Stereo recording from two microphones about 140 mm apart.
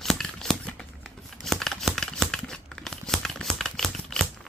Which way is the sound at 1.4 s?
Centre (ahead or behind).